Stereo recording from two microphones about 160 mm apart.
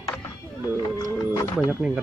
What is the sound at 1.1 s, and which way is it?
Music, 20° left (ahead or behind).